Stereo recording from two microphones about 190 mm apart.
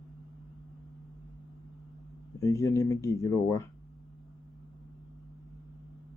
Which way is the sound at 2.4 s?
15° left (ahead or behind).